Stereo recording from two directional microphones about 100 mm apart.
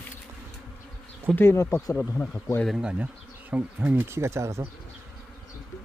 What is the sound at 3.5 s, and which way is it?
Speech, 15° right (ahead or behind).